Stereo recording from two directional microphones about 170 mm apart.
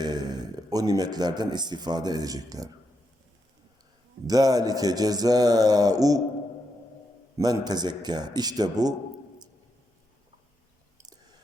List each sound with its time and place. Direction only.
0.0 s speech: 25° right (ahead or behind)
4.3 s speech: 20° right (ahead or behind)
7.3 s speech: 25° right (ahead or behind)